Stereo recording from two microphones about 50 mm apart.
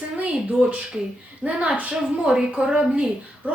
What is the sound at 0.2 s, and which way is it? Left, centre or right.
A woman's voice, right.